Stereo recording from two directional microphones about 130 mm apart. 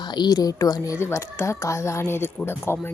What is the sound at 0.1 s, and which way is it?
Speech, 35° left (ahead or behind).